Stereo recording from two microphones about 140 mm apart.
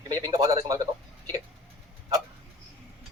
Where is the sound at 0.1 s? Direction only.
25° right (ahead or behind).